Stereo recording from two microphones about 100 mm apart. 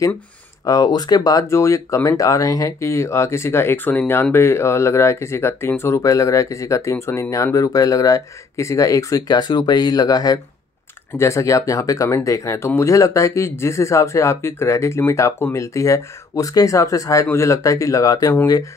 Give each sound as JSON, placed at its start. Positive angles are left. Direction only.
{"t": 0.7, "sound": "speech", "side_deg": 40}